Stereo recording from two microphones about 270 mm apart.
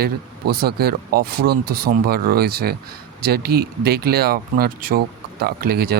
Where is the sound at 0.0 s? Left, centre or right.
Right.